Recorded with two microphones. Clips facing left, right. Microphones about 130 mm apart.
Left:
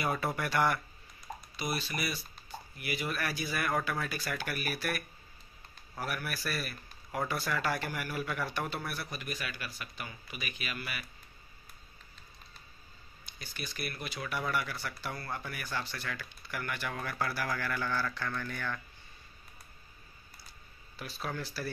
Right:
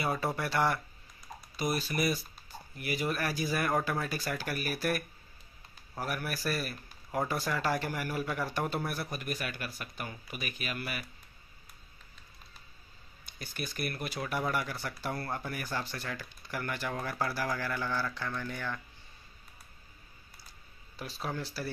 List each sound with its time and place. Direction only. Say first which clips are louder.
0.0 s speech: right 1 dB; 35° right (ahead or behind)
1.6 s speech: right 5 dB; 45° right (ahead or behind)
6.7 s a sound: right 3 dB; 25° right (ahead or behind)
7.4 s speech: right 2 dB; 30° right (ahead or behind)
13.4 s speech: right 4 dB; 50° right (ahead or behind)
14.5 s speech: right 1 dB; 35° right (ahead or behind); by 18.8 s 20° right (ahead or behind)
21.2 s speech: right 1 dB; 25° right (ahead or behind)